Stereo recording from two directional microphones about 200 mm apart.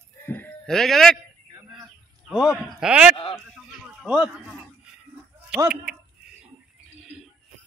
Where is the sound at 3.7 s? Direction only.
5° right (ahead or behind).